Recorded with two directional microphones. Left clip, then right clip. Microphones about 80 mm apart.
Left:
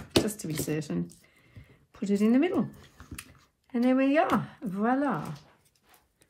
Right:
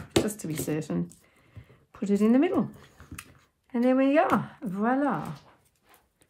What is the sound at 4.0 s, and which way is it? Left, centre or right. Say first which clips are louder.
Speech: right 2 dB; right.